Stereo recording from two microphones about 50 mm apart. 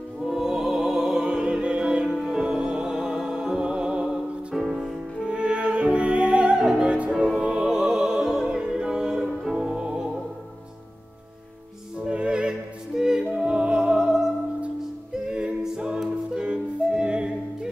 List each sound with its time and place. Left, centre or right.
0.3 s music: centre
4.6 s music: centre
5.2 s music: right
6.6 s opera: centre
6.9 s music: right
12.0 s opera: centre
13.4 s music: right
15.2 s music: centre